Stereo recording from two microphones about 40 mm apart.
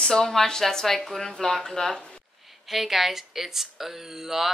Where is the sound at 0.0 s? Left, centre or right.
Centre.